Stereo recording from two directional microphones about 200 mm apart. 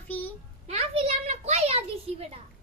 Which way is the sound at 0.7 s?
30° right (ahead or behind).